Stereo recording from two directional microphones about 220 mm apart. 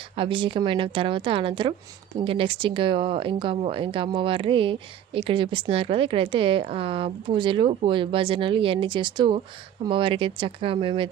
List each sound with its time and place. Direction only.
0.2 s speech: 25° right (ahead or behind)